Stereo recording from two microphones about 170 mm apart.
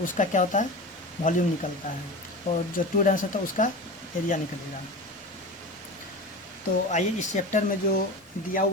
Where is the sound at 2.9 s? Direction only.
50° left (ahead or behind).